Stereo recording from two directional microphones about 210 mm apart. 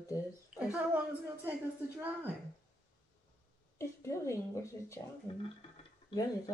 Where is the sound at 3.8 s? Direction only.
15° left (ahead or behind).